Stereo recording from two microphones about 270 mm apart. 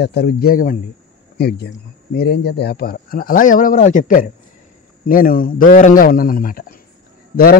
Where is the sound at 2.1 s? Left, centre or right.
Left.